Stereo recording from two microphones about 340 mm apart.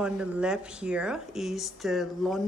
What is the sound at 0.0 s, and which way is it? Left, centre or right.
Speech, centre.